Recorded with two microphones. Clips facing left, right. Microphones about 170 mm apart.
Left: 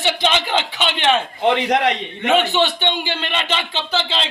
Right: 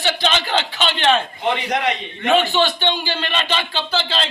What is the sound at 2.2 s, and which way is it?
A man's voice, 20° left (ahead or behind).